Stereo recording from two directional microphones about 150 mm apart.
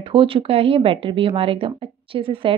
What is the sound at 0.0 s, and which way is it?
Speech, 35° right (ahead or behind).